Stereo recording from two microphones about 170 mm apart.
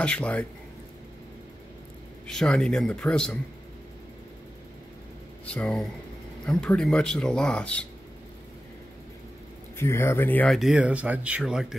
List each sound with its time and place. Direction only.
0.0 s speech: 5° left (ahead or behind)
2.2 s speech: 5° left (ahead or behind)
5.4 s speech: 5° left (ahead or behind)
9.8 s speech: 15° left (ahead or behind); by 11.6 s 5° right (ahead or behind)